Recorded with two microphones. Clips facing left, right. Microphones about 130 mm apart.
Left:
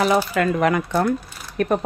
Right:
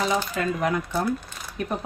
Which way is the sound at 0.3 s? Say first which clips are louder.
Left 6 dB; 75° left (ahead or behind).